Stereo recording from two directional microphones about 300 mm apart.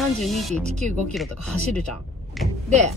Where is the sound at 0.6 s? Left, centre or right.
Right.